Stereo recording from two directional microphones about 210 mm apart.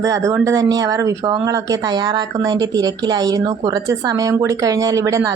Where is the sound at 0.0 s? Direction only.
15° right (ahead or behind).